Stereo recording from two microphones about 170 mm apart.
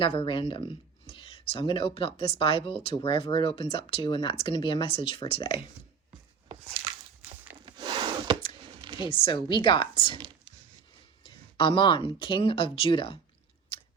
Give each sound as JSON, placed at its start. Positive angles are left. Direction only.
{"t": 0.0, "sound": "speech", "side_deg": 30}
{"t": 7.6, "sound": "a sound", "side_deg": -25}
{"t": 9.0, "sound": "speech", "side_deg": 30}
{"t": 11.2, "sound": "speech", "side_deg": 30}
{"t": 13.7, "sound": "chewing", "side_deg": 30}